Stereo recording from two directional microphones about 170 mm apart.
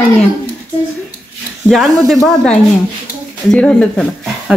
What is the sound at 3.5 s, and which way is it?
Speech, 5° left (ahead or behind).